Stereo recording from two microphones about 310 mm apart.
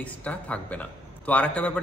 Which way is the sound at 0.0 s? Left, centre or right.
Centre.